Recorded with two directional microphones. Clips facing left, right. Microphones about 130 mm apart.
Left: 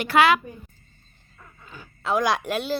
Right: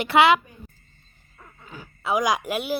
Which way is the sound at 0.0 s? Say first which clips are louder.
Right 1 dB; 20° right (ahead or behind).